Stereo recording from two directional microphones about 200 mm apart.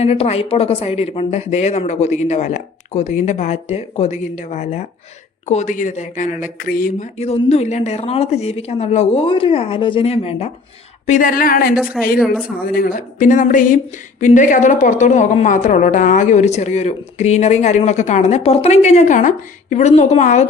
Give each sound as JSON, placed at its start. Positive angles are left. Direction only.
{"t": 0.0, "sound": "a woman's voice", "side_deg": 30}
{"t": 7.2, "sound": "a woman's voice", "side_deg": 30}
{"t": 12.0, "sound": "speech", "side_deg": 0}
{"t": 12.3, "sound": "a woman's voice", "side_deg": 50}